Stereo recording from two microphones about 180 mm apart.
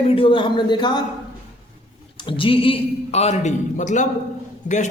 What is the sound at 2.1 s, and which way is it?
A man's voice, 30° left (ahead or behind).